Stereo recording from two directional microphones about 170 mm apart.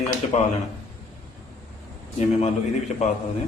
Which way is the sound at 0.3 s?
40° left (ahead or behind).